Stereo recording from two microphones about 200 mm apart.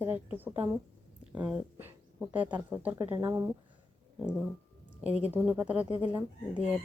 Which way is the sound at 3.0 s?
15° right (ahead or behind).